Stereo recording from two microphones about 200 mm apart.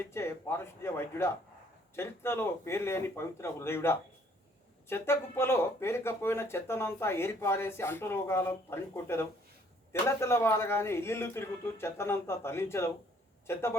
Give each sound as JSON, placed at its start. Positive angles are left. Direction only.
{"t": 0.1, "sound": "speech", "side_deg": 15}